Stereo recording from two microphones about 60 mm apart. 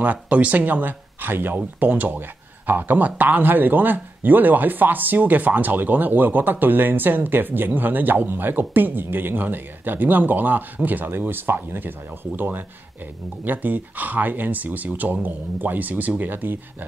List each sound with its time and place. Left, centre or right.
0.0 s speech: right